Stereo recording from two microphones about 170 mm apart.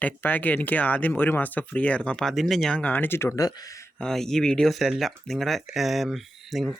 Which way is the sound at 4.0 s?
5° left (ahead or behind).